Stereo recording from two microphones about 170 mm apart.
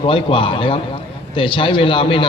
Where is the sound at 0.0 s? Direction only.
30° left (ahead or behind).